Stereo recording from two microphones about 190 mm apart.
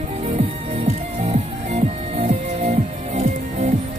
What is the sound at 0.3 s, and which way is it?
Music, 35° right (ahead or behind).